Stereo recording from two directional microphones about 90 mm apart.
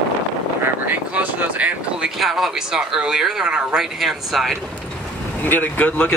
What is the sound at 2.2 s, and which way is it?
Speech, centre (ahead or behind).